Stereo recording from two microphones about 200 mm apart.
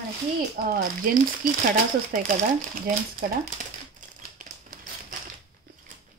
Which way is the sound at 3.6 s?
40° right (ahead or behind).